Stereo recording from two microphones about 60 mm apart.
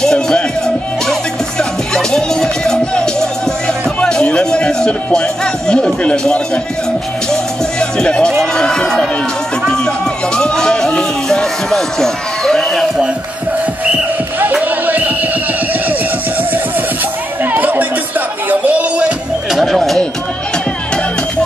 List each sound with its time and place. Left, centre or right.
0.0 s music: centre
1.6 s music: centre
7.8 s speech: centre
9.7 s a sound: centre
14.6 s music: right
17.4 s music: right
18.5 s a sound: right
19.5 s music: centre